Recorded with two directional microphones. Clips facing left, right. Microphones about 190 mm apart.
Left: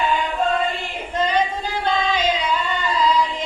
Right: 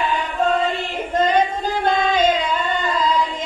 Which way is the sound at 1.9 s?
50° right (ahead or behind).